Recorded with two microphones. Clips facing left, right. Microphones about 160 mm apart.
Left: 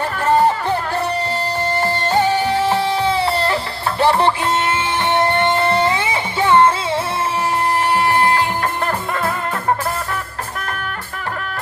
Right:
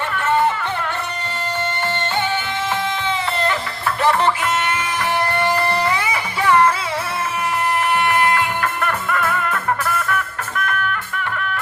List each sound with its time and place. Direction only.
0.3 s music: 35° left (ahead or behind)
2.1 s music: 35° left (ahead or behind)
5.1 s music: 25° left (ahead or behind)
8.2 s music: 30° left (ahead or behind)